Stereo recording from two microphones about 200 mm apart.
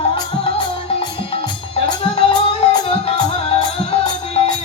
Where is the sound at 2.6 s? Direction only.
25° left (ahead or behind).